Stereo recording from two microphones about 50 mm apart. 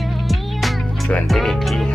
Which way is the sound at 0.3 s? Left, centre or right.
Centre.